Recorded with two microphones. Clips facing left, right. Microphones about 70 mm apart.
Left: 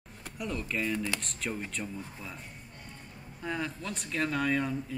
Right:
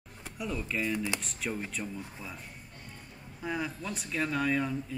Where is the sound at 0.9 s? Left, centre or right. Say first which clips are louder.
Even; centre.